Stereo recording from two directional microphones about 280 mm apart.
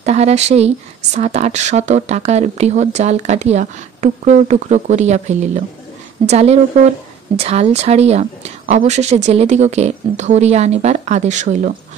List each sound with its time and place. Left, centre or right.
0.0 s speech: right